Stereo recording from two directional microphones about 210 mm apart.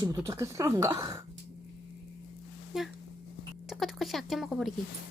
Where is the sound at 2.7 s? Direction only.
5° right (ahead or behind).